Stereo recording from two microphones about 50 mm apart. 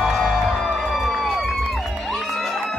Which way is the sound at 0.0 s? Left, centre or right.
Centre.